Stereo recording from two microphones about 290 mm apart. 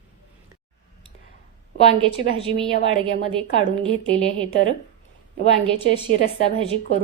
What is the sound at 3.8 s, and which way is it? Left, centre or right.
Speech, right.